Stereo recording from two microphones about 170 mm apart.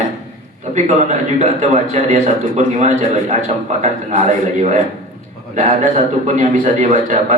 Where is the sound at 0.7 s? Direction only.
45° right (ahead or behind).